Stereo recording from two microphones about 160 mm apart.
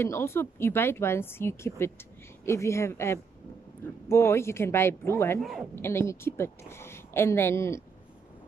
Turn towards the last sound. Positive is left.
turn(degrees=15)  # may be behind; listen again after turning